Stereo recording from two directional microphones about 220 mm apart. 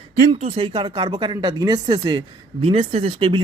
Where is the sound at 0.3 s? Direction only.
30° right (ahead or behind).